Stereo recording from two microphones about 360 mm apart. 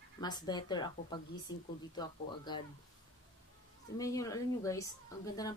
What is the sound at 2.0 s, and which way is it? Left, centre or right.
Speech, centre.